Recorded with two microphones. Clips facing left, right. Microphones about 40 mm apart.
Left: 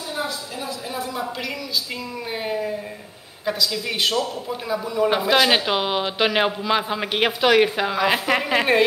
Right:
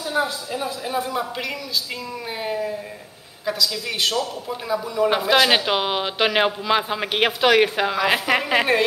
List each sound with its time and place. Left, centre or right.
0.6 s speech: centre
2.4 s a woman's voice: centre